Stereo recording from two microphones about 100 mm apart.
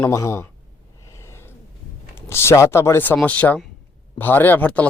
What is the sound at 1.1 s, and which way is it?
Snort, 25° left (ahead or behind).